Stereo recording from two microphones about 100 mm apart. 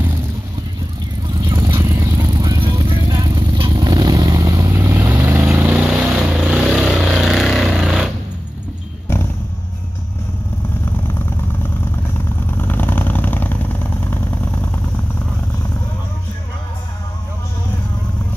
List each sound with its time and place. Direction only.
1.4 s vehicle: 35° right (ahead or behind)
2.6 s vehicle: 55° right (ahead or behind)
3.8 s vehicle: 40° right (ahead or behind); by 8.1 s 5° right (ahead or behind)
9.1 s a sound: 25° left (ahead or behind)
12.4 s vehicle: 20° left (ahead or behind)